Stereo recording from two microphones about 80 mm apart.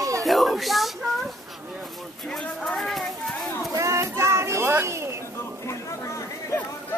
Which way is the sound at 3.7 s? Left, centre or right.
Right.